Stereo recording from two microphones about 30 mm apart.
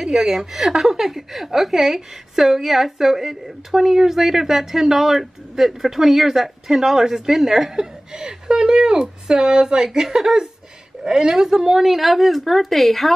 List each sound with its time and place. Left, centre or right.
0.0 s speech: centre
7.7 s a woman's voice: right
11.8 s speech: centre